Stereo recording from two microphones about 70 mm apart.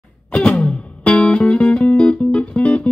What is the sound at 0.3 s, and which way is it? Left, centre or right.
Music, centre.